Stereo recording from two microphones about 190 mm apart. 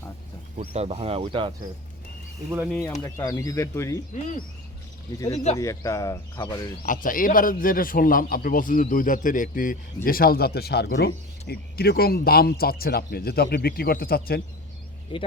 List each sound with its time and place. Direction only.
0.6 s speech: 30° right (ahead or behind)
2.5 s speech: 5° right (ahead or behind)
2.8 s speech: 15° left (ahead or behind)
4.1 s speech: 40° left (ahead or behind)
5.5 s speech: 15° left (ahead or behind)
6.8 s a man's voice: 45° left (ahead or behind)
15.1 s speech: 25° left (ahead or behind)